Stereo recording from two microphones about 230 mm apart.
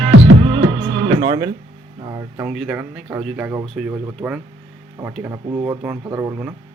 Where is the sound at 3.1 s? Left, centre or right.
Centre.